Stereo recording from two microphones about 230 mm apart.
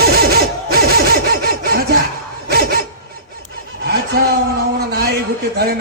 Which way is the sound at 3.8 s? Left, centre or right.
Right.